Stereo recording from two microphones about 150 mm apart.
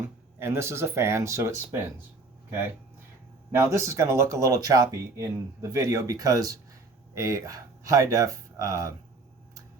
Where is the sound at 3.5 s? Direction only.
20° right (ahead or behind).